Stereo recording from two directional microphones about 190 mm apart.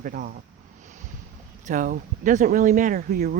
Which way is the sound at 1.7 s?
45° right (ahead or behind).